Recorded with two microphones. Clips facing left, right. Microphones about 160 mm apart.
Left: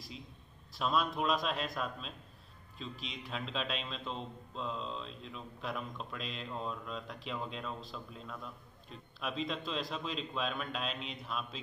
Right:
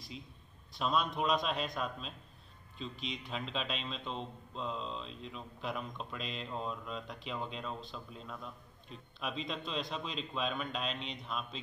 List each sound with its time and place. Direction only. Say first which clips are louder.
0.7 s a man's voice: even; centre (ahead or behind)